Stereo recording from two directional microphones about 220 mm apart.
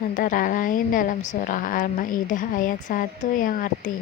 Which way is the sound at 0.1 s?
40° left (ahead or behind).